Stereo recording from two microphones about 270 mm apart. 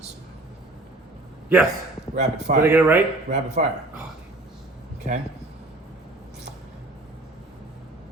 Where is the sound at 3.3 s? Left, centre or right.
Right.